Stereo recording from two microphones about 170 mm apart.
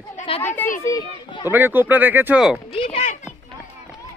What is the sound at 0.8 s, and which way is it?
Children playing, 20° left (ahead or behind).